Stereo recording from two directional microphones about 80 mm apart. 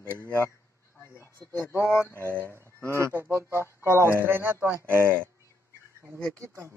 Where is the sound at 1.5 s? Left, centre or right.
Left.